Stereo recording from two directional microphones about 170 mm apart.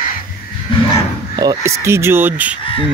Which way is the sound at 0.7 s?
30° left (ahead or behind).